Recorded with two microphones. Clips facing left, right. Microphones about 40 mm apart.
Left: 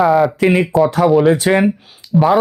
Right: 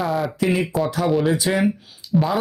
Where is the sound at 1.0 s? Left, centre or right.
Centre.